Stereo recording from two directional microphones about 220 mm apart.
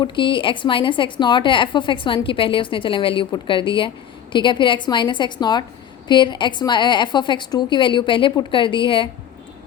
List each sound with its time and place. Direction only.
0.0 s a woman's voice: 20° left (ahead or behind)